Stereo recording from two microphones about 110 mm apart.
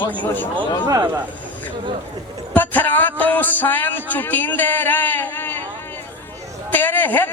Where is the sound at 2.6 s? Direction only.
15° left (ahead or behind).